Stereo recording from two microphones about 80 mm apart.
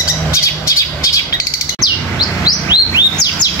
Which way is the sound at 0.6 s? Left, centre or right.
Left.